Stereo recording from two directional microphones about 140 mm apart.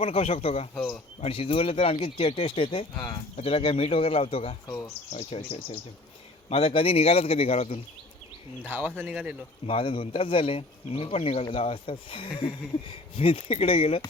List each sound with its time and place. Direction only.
0.0 s speech: 45° left (ahead or behind)
0.8 s speech: 5° left (ahead or behind)
1.2 s speech: 40° left (ahead or behind)
8.7 s speech: 15° right (ahead or behind)
9.6 s speech: 40° left (ahead or behind)